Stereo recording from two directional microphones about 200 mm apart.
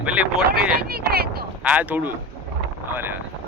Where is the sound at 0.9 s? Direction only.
50° right (ahead or behind).